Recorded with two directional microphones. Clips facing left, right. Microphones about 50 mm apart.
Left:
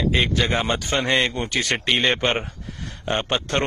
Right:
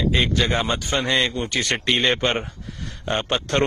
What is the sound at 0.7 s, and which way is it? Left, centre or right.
Speech, left.